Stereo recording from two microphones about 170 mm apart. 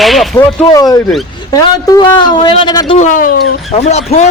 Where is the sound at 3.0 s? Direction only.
50° left (ahead or behind).